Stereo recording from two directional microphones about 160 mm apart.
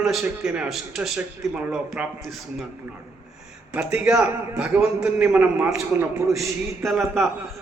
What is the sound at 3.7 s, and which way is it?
A man's voice, 10° right (ahead or behind).